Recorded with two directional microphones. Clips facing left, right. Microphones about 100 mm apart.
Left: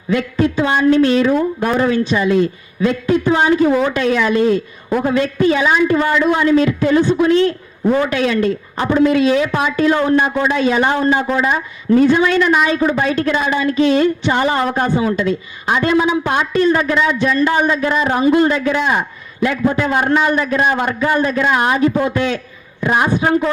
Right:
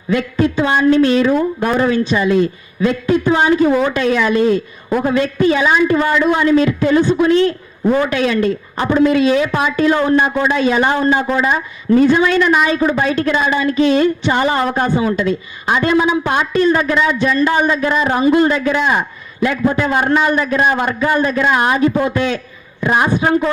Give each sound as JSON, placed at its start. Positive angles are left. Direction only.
{"t": 0.1, "sound": "a woman's voice", "side_deg": -20}